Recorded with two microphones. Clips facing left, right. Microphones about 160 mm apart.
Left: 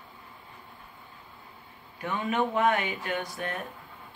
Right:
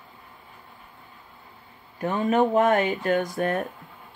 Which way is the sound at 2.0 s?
40° right (ahead or behind).